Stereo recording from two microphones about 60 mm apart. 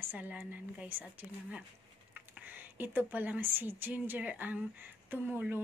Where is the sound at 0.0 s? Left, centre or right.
Right.